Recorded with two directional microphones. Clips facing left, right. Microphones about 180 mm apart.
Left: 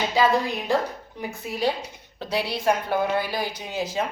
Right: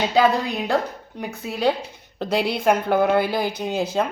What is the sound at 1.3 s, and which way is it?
A woman's voice, 60° right (ahead or behind).